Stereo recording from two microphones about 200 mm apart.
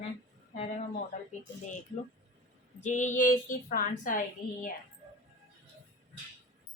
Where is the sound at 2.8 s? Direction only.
40° left (ahead or behind).